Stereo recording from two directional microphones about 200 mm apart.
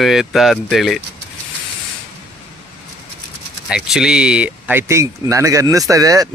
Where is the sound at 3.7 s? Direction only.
Centre (ahead or behind).